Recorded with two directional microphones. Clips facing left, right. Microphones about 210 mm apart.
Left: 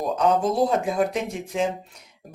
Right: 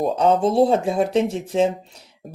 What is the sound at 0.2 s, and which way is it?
Speech, 30° right (ahead or behind).